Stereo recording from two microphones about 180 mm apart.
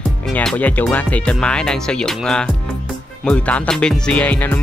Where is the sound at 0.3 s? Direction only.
5° left (ahead or behind).